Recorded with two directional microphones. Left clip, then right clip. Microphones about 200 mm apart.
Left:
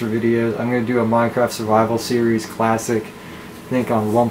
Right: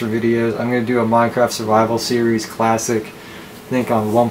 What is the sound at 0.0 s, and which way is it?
Speech, 10° left (ahead or behind).